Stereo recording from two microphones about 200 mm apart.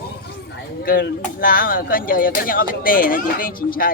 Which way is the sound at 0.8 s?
45° left (ahead or behind).